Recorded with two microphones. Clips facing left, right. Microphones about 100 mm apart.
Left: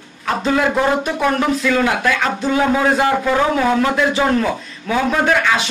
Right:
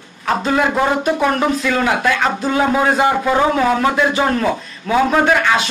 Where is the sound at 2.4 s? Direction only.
10° right (ahead or behind).